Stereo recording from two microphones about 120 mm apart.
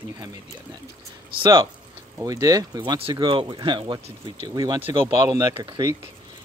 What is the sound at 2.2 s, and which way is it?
Speech, 30° right (ahead or behind).